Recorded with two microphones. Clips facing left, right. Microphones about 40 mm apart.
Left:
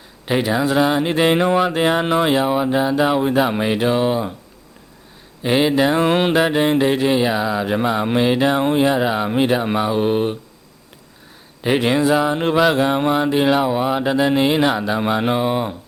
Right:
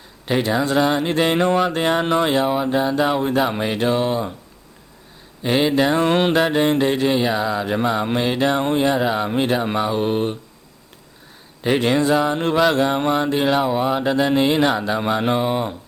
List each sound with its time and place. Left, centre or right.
0.3 s mantra: centre
5.4 s mantra: centre
11.6 s mantra: centre